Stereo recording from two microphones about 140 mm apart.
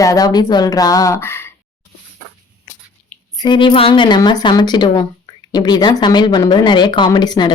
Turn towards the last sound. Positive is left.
turn(degrees=30)  # may be behind; listen again after turning